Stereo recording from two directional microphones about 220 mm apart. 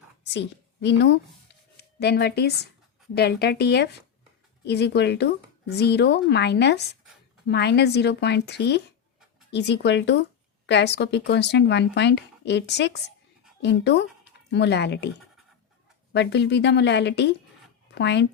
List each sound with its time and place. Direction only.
0.3 s a woman's voice: 50° left (ahead or behind)
16.1 s speech: 50° left (ahead or behind)